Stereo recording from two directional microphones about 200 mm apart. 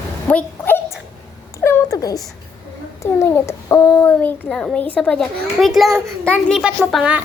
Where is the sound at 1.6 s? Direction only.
15° left (ahead or behind).